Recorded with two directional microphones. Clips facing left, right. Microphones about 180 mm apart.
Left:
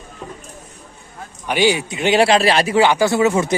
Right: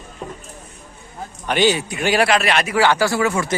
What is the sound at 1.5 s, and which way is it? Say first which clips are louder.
A man's voice: left 1 dB; 10° left (ahead or behind).